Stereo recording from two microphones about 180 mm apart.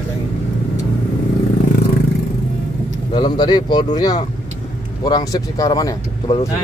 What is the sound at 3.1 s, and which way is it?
Speech, 25° left (ahead or behind).